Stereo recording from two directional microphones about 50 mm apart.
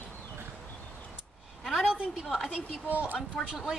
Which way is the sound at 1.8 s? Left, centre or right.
Centre.